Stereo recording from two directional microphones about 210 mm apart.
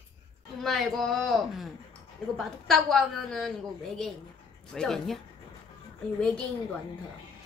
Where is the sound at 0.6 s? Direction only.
Centre (ahead or behind).